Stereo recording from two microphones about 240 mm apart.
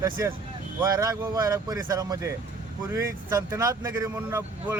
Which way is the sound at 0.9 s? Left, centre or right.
Centre.